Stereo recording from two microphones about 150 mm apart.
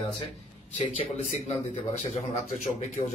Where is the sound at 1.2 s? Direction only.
45° left (ahead or behind).